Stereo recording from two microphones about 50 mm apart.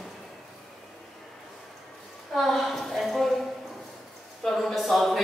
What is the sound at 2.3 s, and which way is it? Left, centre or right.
A woman's voice, centre.